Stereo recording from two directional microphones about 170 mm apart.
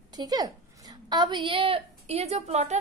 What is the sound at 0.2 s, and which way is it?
A woman's voice, 25° right (ahead or behind).